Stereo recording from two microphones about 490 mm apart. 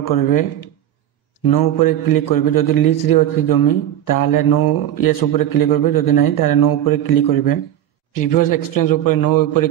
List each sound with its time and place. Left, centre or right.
0.0 s a man's voice: left